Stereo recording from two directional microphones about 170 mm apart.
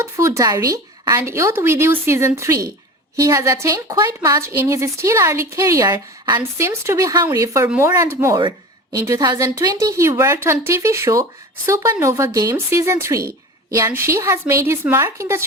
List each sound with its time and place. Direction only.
0.0 s a woman's voice: 20° right (ahead or behind)